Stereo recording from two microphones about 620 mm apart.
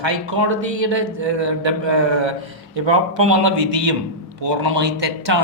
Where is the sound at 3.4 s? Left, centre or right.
Right.